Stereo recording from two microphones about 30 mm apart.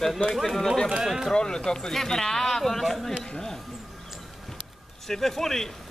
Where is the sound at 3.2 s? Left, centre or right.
Centre.